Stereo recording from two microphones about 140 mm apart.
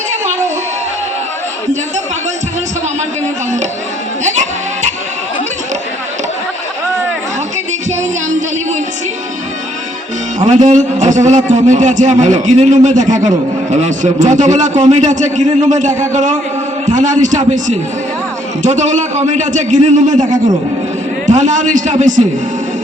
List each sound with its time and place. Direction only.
4.2 s bleat: 60° right (ahead or behind)
10.6 s a man's voice: 60° right (ahead or behind)